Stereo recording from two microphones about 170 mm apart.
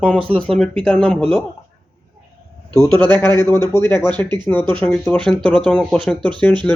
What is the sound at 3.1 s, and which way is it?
Speech, 25° right (ahead or behind).